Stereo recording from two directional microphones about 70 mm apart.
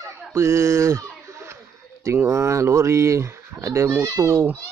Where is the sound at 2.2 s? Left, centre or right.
Right.